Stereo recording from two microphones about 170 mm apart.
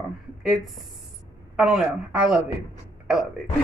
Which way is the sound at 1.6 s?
5° right (ahead or behind).